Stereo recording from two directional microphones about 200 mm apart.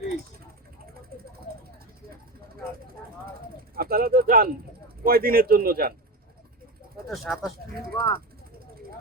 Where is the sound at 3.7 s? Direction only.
50° right (ahead or behind).